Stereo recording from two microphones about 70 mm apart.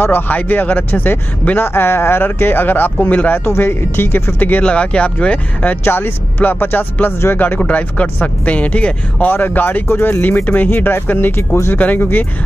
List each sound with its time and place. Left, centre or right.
0.0 s speech: left
3.4 s speech: left
11.7 s speech: left